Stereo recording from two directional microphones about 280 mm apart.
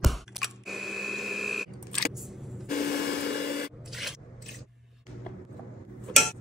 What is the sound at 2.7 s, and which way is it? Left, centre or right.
Wood, left.